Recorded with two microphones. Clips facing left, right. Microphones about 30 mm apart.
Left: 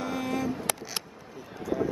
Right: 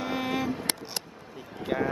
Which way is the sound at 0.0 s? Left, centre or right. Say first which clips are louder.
Right 1 dB; right.